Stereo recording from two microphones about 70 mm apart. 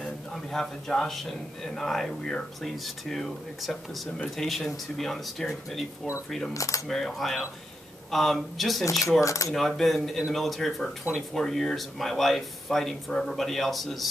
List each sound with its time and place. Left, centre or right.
0.0 s a man's voice: centre
6.5 s speech: left
6.9 s a man's voice: centre
9.2 s speech: left
9.5 s a man's voice: centre